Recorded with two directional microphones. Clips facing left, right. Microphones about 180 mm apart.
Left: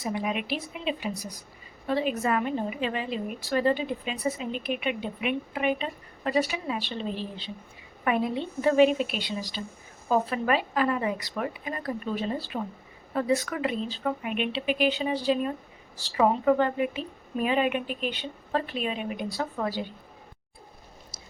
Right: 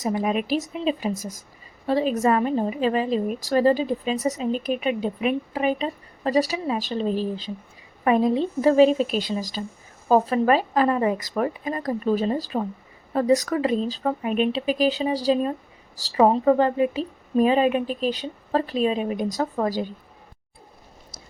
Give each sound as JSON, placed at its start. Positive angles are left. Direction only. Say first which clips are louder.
{"t": 0.0, "sound": "a woman's voice", "louder": "right 6 dB", "side_deg": -45}